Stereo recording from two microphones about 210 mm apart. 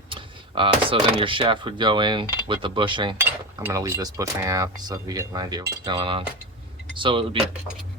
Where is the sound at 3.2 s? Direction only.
10° right (ahead or behind).